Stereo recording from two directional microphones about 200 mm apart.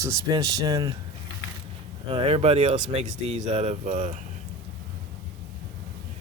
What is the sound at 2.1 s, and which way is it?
Speech, 25° right (ahead or behind).